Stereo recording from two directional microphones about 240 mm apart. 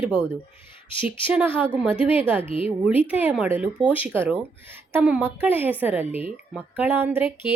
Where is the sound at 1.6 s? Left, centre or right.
Centre.